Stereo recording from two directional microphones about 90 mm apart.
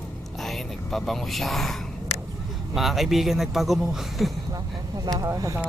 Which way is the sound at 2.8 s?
Centre (ahead or behind).